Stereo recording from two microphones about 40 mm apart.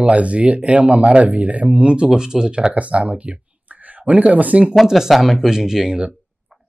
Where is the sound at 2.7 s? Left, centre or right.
Right.